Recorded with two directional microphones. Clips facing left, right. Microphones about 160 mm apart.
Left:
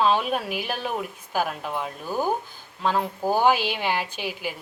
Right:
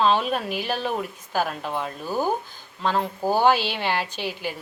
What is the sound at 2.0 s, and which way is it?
Speech, 10° right (ahead or behind).